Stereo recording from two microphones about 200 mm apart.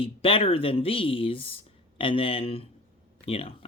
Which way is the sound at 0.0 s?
25° left (ahead or behind).